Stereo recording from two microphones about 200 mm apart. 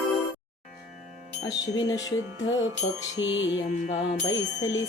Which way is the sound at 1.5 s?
20° left (ahead or behind).